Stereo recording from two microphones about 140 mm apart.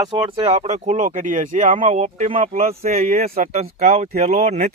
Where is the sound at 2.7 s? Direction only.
50° right (ahead or behind).